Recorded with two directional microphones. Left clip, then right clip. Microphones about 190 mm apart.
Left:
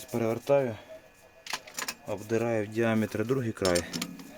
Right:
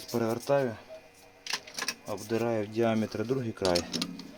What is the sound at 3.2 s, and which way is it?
Cutlery, 35° left (ahead or behind).